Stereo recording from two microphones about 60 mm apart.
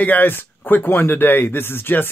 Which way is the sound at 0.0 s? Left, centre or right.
Left.